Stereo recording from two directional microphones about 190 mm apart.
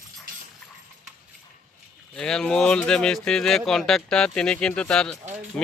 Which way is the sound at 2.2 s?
5° left (ahead or behind).